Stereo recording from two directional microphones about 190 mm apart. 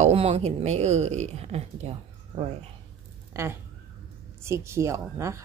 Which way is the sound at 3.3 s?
15° right (ahead or behind).